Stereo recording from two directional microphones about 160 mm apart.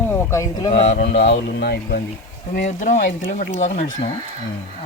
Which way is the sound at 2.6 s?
50° left (ahead or behind).